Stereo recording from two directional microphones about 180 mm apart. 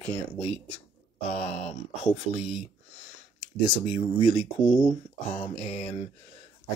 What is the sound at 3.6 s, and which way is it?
Speech, 30° left (ahead or behind).